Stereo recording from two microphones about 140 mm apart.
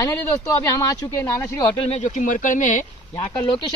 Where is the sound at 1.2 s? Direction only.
15° left (ahead or behind).